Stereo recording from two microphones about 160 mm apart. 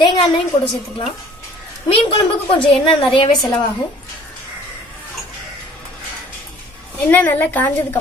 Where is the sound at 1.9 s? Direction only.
30° left (ahead or behind).